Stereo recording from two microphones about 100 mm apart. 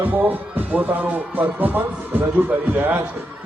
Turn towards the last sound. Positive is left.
turn(degrees=-20)  # may be behind; listen again after turning